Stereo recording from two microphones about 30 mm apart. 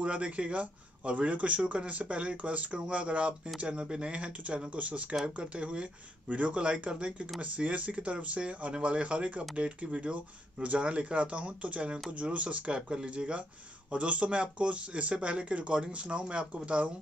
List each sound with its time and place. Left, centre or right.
0.0 s speech: right
3.5 s speech: right